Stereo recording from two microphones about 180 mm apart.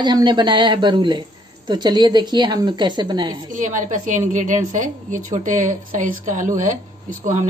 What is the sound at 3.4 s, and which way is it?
Speech, 45° right (ahead or behind).